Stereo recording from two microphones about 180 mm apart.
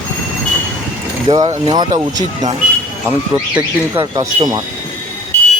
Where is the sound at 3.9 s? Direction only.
25° right (ahead or behind).